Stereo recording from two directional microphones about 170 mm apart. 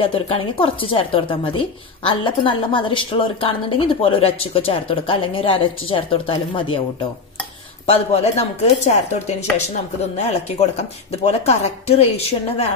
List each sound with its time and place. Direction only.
0.0 s a woman's voice: 30° left (ahead or behind)
7.8 s a woman's voice: 35° left (ahead or behind)
11.2 s a woman's voice: 40° left (ahead or behind)